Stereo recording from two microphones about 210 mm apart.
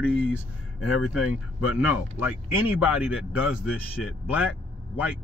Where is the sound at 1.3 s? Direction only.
90° left.